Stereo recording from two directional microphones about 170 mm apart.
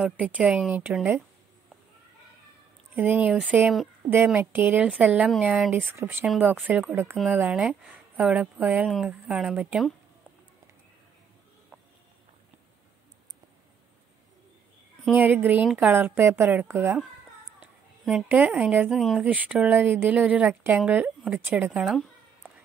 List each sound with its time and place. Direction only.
0.0 s speech: 5° right (ahead or behind)
2.9 s speech: 10° right (ahead or behind)
15.1 s speech: 10° right (ahead or behind)
18.0 s speech: 5° right (ahead or behind)